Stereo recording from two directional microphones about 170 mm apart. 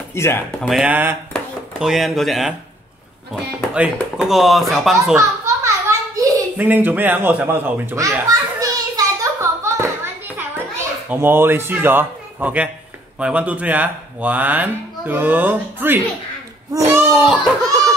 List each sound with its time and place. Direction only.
0.1 s speech: 15° left (ahead or behind)
0.6 s speech: centre (ahead or behind)
3.7 s speech: 5° right (ahead or behind)
5.1 s a sound: 15° right (ahead or behind)
11.1 s speech: 15° right (ahead or behind)
16.7 s a sound: 15° right (ahead or behind)